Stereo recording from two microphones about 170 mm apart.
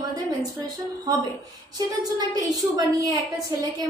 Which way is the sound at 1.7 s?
20° right (ahead or behind).